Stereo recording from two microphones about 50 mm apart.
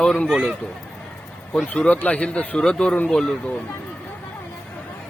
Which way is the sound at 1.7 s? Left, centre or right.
Left.